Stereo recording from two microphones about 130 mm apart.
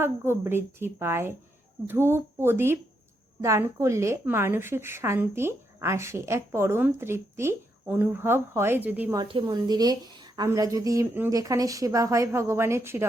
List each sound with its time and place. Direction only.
0.0 s a woman's voice: 20° right (ahead or behind)
9.2 s a woman's voice: 35° right (ahead or behind); by 13.1 s 20° right (ahead or behind)